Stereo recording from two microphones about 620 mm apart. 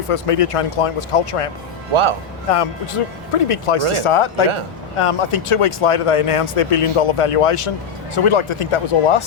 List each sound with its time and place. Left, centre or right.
0.1 s speech: left
1.9 s a man's voice: right
2.5 s speech: left